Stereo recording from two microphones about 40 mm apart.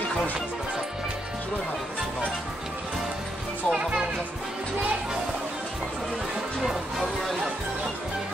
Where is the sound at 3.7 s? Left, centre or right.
Right.